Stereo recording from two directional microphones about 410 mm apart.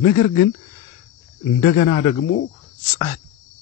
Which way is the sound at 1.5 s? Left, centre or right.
Centre.